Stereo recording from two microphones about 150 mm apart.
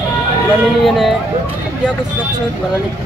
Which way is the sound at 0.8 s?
Centre (ahead or behind).